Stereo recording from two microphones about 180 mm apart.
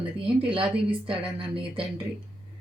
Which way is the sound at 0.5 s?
30° right (ahead or behind).